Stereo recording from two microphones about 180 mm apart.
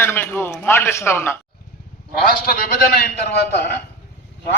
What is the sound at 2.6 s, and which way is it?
Speech, 60° left (ahead or behind).